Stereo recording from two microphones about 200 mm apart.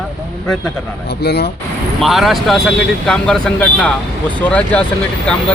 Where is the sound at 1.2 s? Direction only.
55° left (ahead or behind).